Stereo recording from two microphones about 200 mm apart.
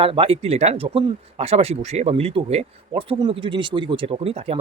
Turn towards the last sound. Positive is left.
turn(degrees=-30)  # may be behind; listen again after turning